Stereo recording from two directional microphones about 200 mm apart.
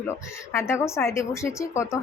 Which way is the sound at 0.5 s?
15° left (ahead or behind).